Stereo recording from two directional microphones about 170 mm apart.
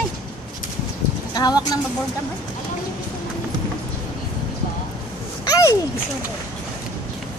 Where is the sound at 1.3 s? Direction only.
25° left (ahead or behind).